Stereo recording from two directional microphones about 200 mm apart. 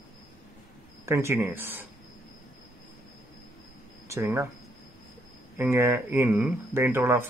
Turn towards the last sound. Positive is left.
turn(degrees=-10)  # may be behind; listen again after turning